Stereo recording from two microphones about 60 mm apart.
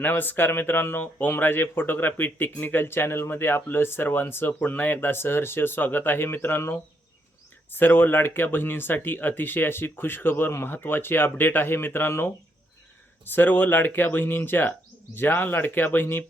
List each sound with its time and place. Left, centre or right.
0.0 s speech: left
7.7 s speech: left
13.3 s speech: left